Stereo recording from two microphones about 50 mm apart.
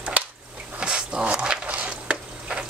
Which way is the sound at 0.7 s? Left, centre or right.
Centre.